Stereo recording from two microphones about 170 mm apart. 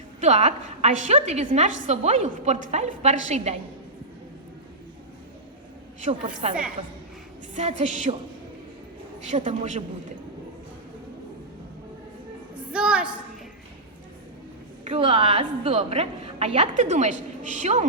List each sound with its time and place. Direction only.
0.2 s a woman's voice: 40° right (ahead or behind)
6.0 s music: 45° right (ahead or behind)
7.5 s music: 40° right (ahead or behind)
9.3 s music: 40° right (ahead or behind)
12.7 s a woman's voice: 5° right (ahead or behind)
14.8 s a woman's voice: 35° right (ahead or behind)